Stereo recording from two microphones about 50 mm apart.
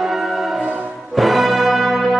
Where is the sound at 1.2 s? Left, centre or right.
Centre.